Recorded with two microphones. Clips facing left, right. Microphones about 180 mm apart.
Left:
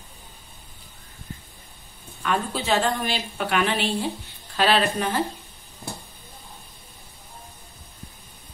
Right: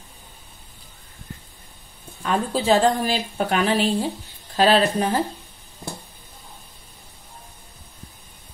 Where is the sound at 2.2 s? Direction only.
35° right (ahead or behind).